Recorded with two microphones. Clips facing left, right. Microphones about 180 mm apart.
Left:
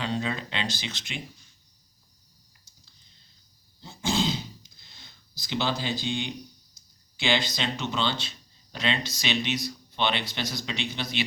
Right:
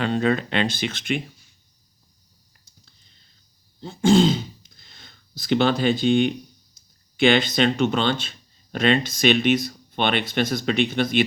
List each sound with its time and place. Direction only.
0.0 s speech: 55° right (ahead or behind)
3.8 s speech: 55° right (ahead or behind)